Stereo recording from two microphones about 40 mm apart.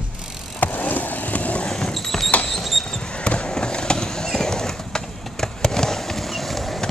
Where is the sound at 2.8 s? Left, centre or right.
Centre.